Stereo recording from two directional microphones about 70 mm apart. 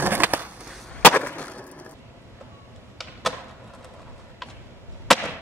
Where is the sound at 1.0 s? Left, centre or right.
Left.